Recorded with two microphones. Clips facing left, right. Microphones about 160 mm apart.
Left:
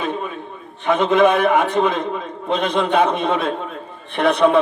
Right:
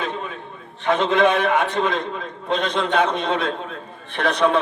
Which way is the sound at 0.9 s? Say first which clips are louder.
Left 3 dB; 55° left (ahead or behind).